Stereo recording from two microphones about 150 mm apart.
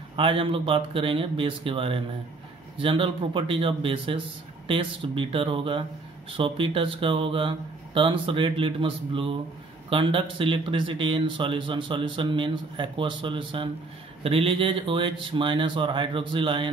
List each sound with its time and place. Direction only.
0.1 s speech: 35° right (ahead or behind)